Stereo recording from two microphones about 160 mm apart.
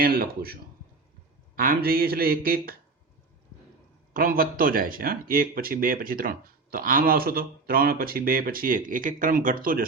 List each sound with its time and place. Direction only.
0.0 s speech: 65° right (ahead or behind)
4.1 s speech: 60° right (ahead or behind)